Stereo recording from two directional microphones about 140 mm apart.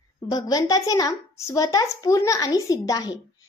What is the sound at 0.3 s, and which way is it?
A woman's voice, 25° left (ahead or behind).